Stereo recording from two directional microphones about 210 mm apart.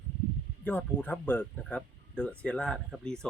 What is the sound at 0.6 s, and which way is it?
Speech, 10° left (ahead or behind).